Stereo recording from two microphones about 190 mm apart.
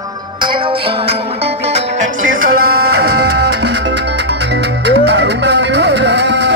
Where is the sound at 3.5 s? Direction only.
65° right (ahead or behind).